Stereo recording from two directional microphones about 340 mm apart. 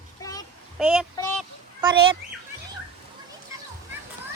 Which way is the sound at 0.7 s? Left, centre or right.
Centre.